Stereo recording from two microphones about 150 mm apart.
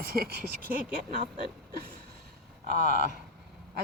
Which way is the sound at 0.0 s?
85° right.